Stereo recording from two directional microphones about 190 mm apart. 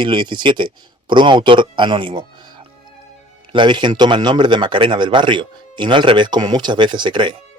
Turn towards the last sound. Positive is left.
turn(degrees=-25)  # may be behind; listen again after turning